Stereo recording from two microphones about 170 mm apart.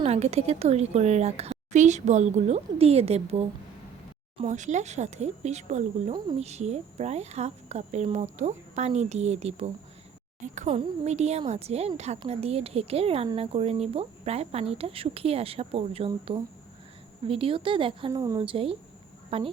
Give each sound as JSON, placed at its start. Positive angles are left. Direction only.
{"t": 0.0, "sound": "a woman's voice", "side_deg": -35}
{"t": 18.1, "sound": "a woman's voice", "side_deg": -20}
{"t": 18.4, "sound": "a woman's voice", "side_deg": -35}